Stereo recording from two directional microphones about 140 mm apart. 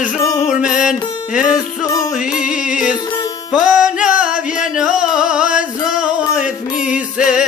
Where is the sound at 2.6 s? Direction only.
5° right (ahead or behind).